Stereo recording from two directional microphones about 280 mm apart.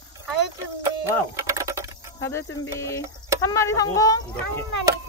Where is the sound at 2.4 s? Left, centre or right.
Left.